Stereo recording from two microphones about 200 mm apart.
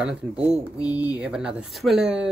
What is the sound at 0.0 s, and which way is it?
Speech, 5° right (ahead or behind).